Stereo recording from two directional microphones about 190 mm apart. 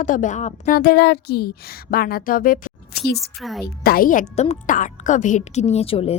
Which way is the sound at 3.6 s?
55° left (ahead or behind).